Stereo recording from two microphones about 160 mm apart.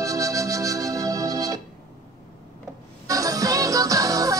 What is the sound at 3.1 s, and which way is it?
Music, 20° right (ahead or behind).